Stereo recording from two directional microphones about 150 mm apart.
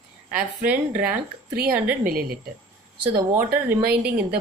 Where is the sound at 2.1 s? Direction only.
80° right.